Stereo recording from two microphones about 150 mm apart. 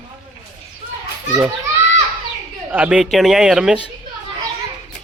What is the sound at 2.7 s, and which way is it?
Speech, 10° right (ahead or behind).